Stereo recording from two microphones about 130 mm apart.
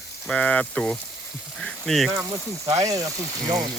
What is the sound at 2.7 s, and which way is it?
Speech, 25° right (ahead or behind).